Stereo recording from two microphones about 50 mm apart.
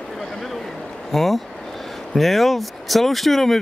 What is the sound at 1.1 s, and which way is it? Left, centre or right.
Speech, centre.